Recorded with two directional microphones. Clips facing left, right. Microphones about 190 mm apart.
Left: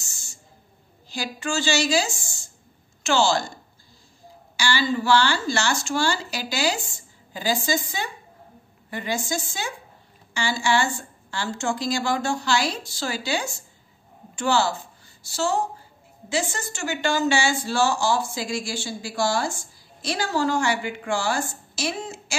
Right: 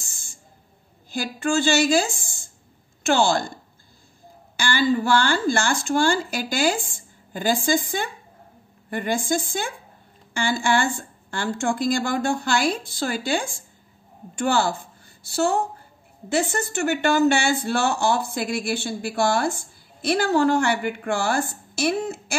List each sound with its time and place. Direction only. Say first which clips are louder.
0.0 s owl: even; 55° right (ahead or behind)
1.1 s a woman's voice: right 5 dB; 55° right (ahead or behind)
4.6 s a woman's voice: right 3 dB; 55° right (ahead or behind)